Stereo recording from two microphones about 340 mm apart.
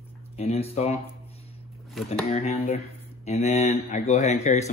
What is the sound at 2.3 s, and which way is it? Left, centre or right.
Speech, centre.